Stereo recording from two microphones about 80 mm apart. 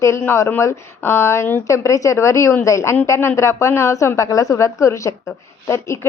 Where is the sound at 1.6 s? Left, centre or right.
Left.